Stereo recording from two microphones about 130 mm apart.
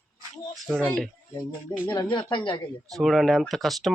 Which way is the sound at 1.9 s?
35° left (ahead or behind).